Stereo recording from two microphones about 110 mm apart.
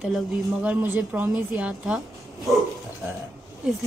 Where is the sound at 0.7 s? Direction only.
15° right (ahead or behind).